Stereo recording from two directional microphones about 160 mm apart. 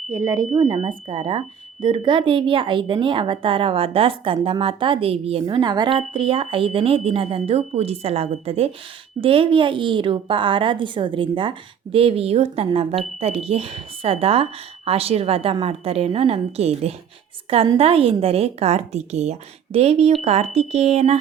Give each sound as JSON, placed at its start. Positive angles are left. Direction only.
{"t": 0.1, "sound": "speech", "side_deg": -20}
{"t": 0.6, "sound": "a woman's voice", "side_deg": -35}